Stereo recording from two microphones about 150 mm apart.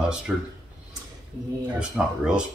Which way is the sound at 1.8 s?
5° right (ahead or behind).